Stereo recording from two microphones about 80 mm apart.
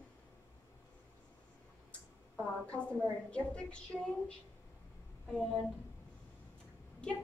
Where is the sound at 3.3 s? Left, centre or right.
Centre.